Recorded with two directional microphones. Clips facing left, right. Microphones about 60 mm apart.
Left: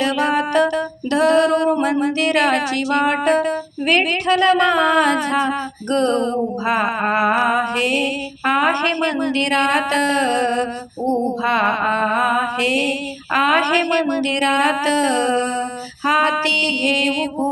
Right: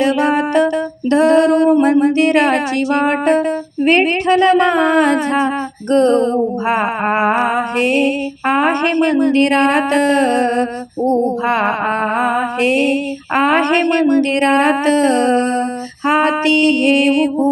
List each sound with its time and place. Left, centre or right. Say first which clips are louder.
0.0 s music: right 4 dB; right
1.1 s female singing: right 4 dB; right
1.8 s music: right 6 dB; right